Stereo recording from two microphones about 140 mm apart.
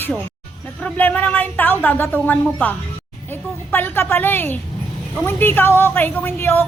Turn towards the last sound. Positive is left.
turn(degrees=15)  # may be behind; listen again after turning